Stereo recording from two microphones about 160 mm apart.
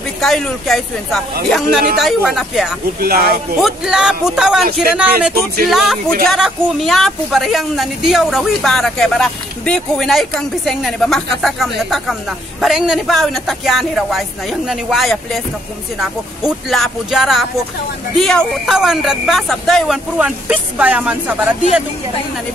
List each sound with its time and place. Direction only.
0.2 s a woman's voice: centre (ahead or behind)
3.0 s speech: 70° right (ahead or behind)
3.6 s a woman's voice: 5° right (ahead or behind)